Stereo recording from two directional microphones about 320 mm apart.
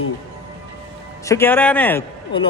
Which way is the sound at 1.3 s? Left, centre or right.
Centre.